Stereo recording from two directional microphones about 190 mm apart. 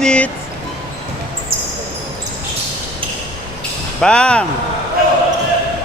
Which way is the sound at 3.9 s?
5° left (ahead or behind).